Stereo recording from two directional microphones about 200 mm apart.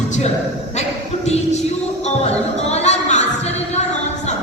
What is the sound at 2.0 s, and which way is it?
Music, 35° left (ahead or behind).